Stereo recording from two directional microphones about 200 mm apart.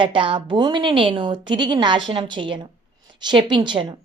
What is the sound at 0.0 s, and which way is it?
A woman's voice, 25° right (ahead or behind).